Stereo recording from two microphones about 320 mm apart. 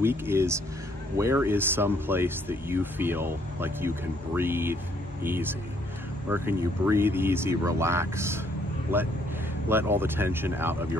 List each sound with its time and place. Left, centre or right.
0.0 s speech: centre